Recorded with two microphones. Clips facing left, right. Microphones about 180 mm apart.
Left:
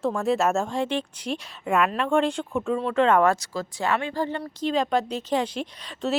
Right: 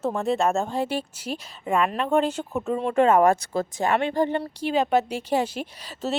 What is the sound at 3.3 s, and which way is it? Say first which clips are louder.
Speech: right 4 dB; 55° right (ahead or behind).